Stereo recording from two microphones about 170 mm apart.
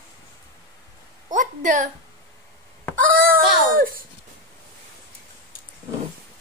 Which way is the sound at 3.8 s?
55° right (ahead or behind).